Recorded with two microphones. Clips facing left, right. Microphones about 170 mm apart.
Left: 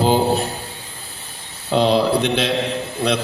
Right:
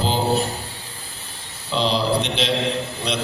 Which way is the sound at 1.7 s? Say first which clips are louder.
Left 5 dB; 55° left (ahead or behind).